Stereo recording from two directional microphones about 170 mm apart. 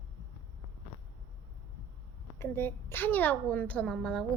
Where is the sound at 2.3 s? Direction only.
15° left (ahead or behind).